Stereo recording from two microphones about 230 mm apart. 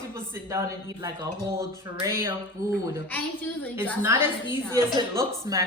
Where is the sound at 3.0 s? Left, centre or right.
Centre.